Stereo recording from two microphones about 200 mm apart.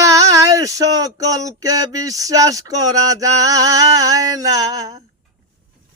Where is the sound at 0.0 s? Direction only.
15° right (ahead or behind).